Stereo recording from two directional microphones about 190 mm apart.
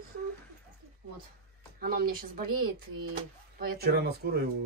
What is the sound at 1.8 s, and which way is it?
A woman's voice, 50° right (ahead or behind).